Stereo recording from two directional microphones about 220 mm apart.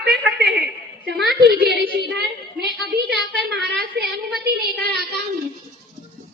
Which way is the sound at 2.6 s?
45° right (ahead or behind).